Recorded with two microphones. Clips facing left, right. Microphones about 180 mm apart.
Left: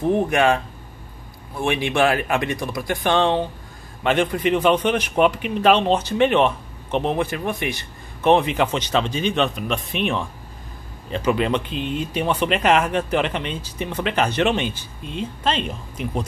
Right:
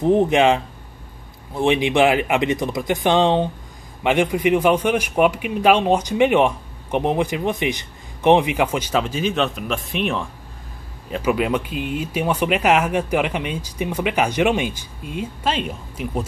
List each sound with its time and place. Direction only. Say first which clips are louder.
0.0 s a man's voice: right 3 dB; 20° right (ahead or behind)